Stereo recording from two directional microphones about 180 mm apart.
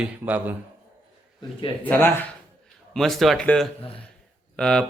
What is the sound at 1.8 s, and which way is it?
A man's voice, 10° left (ahead or behind).